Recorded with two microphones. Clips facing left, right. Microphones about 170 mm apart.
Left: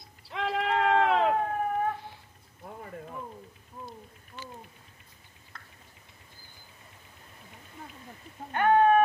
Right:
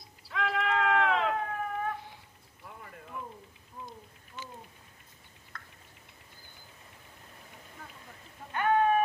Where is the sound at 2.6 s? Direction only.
40° left (ahead or behind).